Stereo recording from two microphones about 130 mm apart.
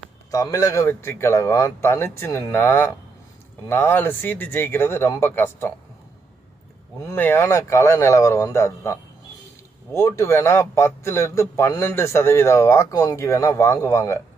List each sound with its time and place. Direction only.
0.3 s a man's voice: 25° left (ahead or behind)
7.0 s a man's voice: 20° left (ahead or behind)